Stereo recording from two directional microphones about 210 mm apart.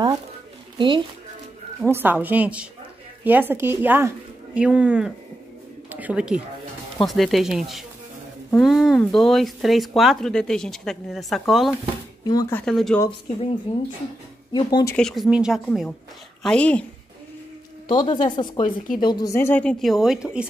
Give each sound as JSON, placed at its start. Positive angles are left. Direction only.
{"t": 0.7, "sound": "speech", "side_deg": -25}
{"t": 1.8, "sound": "a woman's voice", "side_deg": -10}
{"t": 5.9, "sound": "a sound", "side_deg": -5}
{"t": 7.0, "sound": "speech", "side_deg": 0}
{"t": 12.3, "sound": "speech", "side_deg": 15}
{"t": 14.5, "sound": "speech", "side_deg": 20}
{"t": 15.0, "sound": "speech", "side_deg": 0}
{"t": 17.8, "sound": "speech", "side_deg": 20}